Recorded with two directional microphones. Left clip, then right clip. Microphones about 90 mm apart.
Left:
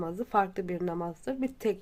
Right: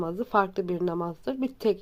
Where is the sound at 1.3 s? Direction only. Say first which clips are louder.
Right 4 dB; 25° right (ahead or behind).